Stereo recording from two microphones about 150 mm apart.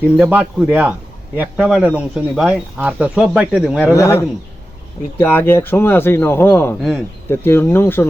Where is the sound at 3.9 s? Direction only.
20° left (ahead or behind).